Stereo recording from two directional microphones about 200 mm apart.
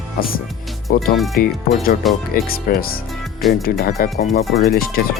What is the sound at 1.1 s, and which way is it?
Speech, centre (ahead or behind).